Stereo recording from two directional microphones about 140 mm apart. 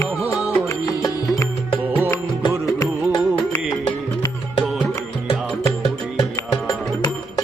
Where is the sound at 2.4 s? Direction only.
30° left (ahead or behind).